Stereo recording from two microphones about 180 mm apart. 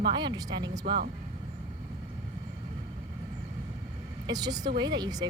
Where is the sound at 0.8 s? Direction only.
65° right (ahead or behind).